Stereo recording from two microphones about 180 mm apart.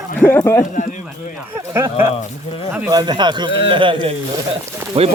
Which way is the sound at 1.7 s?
15° right (ahead or behind).